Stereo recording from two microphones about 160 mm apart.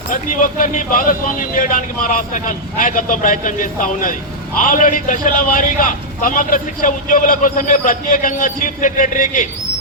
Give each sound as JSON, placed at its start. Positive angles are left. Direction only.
{"t": 0.1, "sound": "a man's voice", "side_deg": 60}